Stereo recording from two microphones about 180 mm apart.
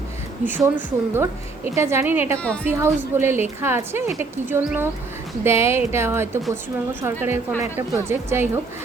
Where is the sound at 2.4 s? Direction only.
5° left (ahead or behind).